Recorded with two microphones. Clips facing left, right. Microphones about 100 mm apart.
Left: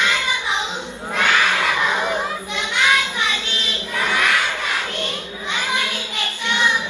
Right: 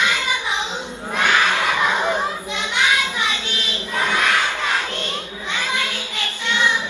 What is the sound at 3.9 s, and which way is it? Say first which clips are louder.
Crowd: right 1 dB; 20° right (ahead or behind).